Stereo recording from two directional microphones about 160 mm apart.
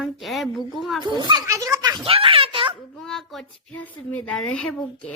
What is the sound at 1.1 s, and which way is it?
Speech, 25° right (ahead or behind).